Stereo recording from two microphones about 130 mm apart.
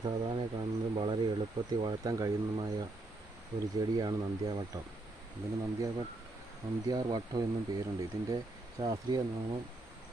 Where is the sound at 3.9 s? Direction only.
30° right (ahead or behind).